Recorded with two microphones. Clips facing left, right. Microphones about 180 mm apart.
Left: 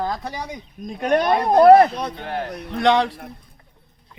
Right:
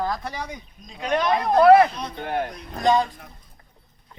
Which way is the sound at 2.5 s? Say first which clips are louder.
Left 4 dB; 75° left (ahead or behind).